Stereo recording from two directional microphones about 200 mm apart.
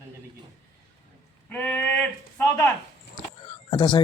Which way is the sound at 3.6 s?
25° left (ahead or behind).